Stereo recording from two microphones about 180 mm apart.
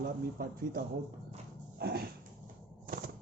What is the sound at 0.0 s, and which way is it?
Speech, 55° right (ahead or behind).